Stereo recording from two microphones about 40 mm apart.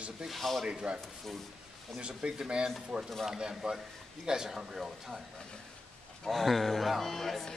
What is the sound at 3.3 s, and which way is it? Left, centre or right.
Speech, centre.